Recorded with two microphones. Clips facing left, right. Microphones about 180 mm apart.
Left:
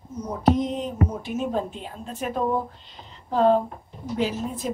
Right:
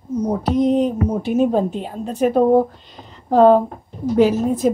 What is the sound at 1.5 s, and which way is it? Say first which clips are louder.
Speech: right 9 dB; 40° right (ahead or behind).